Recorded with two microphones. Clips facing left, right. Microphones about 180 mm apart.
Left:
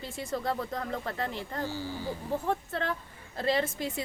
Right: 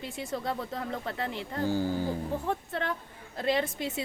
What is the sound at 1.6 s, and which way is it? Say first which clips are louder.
Speech: right 7 dB; 50° right (ahead or behind).